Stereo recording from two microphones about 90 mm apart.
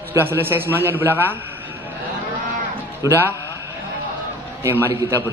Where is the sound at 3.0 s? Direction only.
30° right (ahead or behind).